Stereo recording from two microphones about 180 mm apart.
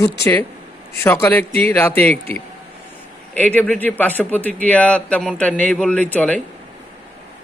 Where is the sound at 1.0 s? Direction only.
10° left (ahead or behind).